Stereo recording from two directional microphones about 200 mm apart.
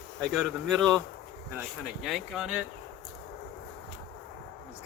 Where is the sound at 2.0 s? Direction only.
Centre (ahead or behind).